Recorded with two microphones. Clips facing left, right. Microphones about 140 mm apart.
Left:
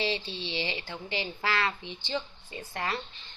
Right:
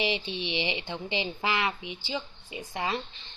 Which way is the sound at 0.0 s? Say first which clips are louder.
Right 2 dB; 15° right (ahead or behind).